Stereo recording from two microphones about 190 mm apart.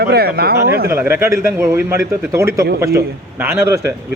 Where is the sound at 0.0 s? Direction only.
55° right (ahead or behind).